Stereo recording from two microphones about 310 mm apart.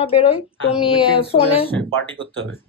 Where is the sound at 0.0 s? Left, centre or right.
Centre.